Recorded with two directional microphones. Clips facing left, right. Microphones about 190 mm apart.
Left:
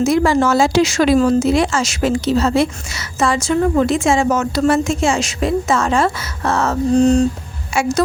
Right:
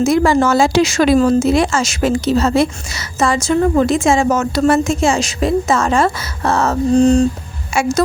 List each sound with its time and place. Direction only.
0.0 s a woman's voice: 50° right (ahead or behind); by 7.3 s 30° right (ahead or behind)
7.8 s speech: 45° right (ahead or behind)